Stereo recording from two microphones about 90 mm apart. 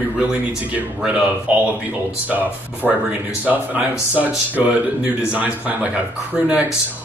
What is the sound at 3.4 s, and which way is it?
Speech, 15° right (ahead or behind).